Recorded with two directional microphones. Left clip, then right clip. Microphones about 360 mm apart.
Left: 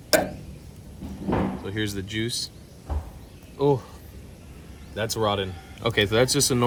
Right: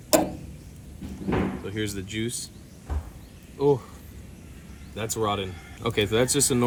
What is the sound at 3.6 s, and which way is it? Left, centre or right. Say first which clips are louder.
Speech: even; centre.